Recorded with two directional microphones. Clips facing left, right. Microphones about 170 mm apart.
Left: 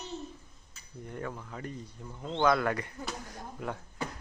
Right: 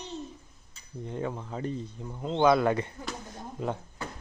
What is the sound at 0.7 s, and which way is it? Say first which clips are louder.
A man's voice: right 5 dB; 20° right (ahead or behind).